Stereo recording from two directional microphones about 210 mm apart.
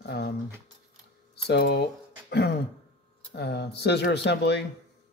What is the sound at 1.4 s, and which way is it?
Speech, 50° left (ahead or behind).